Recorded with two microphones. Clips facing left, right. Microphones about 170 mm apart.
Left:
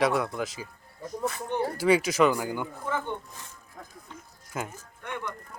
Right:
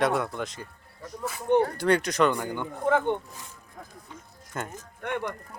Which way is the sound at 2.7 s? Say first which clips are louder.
Right 8 dB; 65° right (ahead or behind).